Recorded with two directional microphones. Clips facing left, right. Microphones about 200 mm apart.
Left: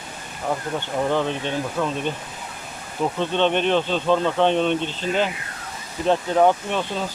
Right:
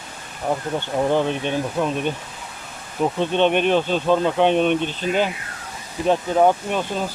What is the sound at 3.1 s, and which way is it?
Speech, 15° right (ahead or behind).